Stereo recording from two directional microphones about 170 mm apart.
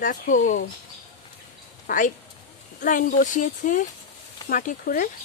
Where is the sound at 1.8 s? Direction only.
50° left (ahead or behind).